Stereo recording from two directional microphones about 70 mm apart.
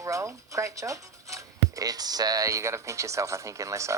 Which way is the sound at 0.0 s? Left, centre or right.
Right.